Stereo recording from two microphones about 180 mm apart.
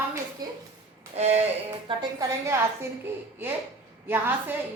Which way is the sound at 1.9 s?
20° right (ahead or behind).